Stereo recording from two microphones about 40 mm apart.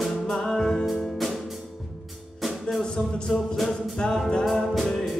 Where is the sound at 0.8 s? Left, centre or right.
Centre.